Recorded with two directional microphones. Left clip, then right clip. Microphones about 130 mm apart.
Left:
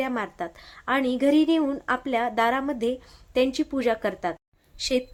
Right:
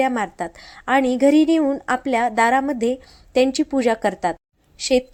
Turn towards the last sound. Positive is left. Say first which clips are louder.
# right 7 dB
turn(degrees=-35)  # may be behind; listen again after turning